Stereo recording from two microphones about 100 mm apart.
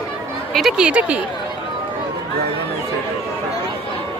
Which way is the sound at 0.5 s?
5° right (ahead or behind).